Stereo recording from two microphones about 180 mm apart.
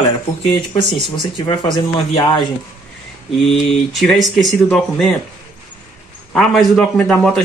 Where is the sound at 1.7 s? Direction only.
25° left (ahead or behind).